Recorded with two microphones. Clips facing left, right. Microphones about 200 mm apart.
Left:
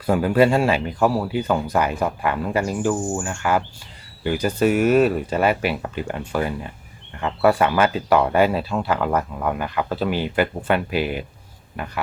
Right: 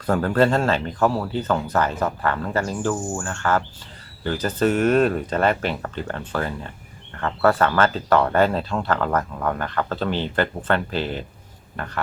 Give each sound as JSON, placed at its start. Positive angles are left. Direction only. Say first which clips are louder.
{"t": 0.0, "sound": "speech", "louder": "left 2 dB", "side_deg": 10}